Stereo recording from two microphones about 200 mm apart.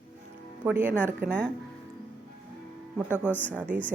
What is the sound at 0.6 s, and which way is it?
Speech, 10° right (ahead or behind).